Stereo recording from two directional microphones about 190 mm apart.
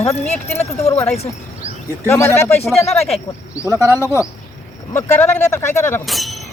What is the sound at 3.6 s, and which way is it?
Speech, 15° right (ahead or behind).